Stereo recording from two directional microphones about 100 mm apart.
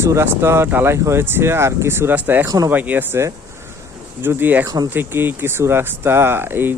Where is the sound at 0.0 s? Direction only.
30° right (ahead or behind).